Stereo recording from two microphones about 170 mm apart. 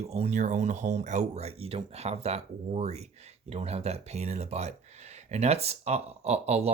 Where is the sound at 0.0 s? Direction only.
40° right (ahead or behind).